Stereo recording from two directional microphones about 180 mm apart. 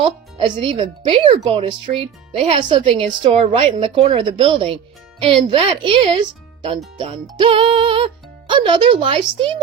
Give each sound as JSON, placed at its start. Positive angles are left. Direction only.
{"t": 0.0, "sound": "a woman's voice", "side_deg": -25}